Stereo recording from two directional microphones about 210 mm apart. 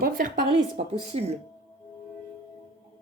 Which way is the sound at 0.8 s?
30° right (ahead or behind).